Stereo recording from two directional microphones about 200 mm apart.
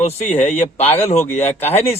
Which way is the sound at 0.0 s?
35° left (ahead or behind).